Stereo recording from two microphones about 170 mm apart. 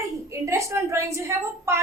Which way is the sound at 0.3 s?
15° right (ahead or behind).